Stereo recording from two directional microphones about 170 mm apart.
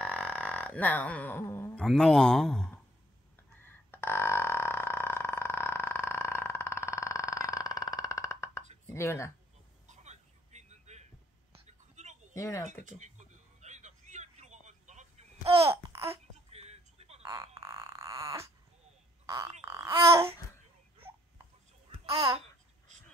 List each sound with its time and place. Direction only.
0.0 s a sound: 5° left (ahead or behind)
1.9 s speech: 5° left (ahead or behind)
3.3 s burping: 15° left (ahead or behind)
8.8 s speech: 15° left (ahead or behind)
9.8 s a sound: 40° right (ahead or behind)
12.4 s speech: 20° left (ahead or behind)
12.8 s vehicle: 45° right (ahead or behind)
15.6 s babbling: 15° right (ahead or behind)
16.4 s music: 40° right (ahead or behind)
17.6 s a sound: 15° right (ahead or behind)
19.2 s frog: 20° right (ahead or behind)
19.6 s babbling: 15° right (ahead or behind)